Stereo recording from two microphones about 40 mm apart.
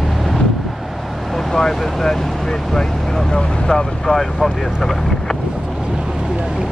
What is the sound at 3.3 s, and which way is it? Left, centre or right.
Vehicle, centre.